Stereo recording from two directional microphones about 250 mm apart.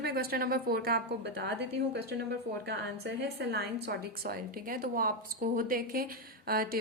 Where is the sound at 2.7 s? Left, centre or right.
Right.